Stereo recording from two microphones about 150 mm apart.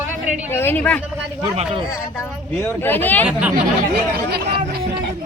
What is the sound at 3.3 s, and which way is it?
Speech, 10° right (ahead or behind).